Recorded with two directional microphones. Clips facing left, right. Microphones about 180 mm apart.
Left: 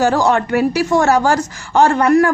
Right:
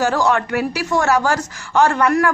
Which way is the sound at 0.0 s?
30° left (ahead or behind).